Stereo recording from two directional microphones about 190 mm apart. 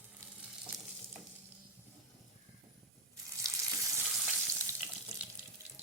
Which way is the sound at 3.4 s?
15° right (ahead or behind).